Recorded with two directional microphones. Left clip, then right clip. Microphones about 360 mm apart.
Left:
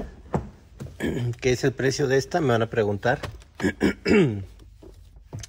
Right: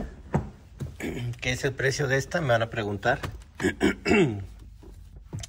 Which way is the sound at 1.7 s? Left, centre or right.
Centre.